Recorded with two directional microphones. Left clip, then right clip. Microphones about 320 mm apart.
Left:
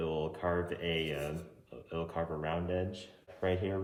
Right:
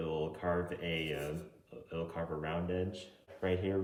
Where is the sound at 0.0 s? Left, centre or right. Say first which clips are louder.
Left 2 dB; centre.